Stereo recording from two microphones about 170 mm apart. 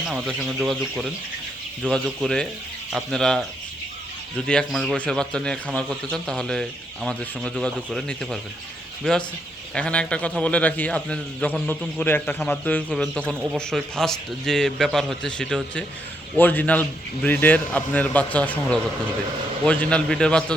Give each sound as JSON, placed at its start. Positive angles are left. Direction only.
{"t": 0.1, "sound": "a man's voice", "side_deg": -5}
{"t": 4.4, "sound": "a man's voice", "side_deg": 5}
{"t": 9.7, "sound": "a man's voice", "side_deg": 5}